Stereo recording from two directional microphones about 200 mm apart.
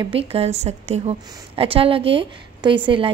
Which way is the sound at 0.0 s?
30° right (ahead or behind).